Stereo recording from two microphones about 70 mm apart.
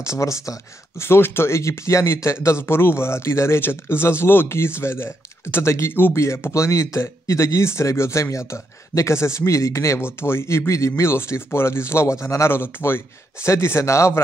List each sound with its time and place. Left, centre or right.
0.0 s speech: left